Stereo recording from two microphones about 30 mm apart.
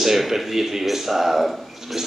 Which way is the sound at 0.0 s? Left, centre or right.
Centre.